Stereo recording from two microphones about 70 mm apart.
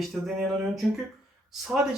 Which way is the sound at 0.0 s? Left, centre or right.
Centre.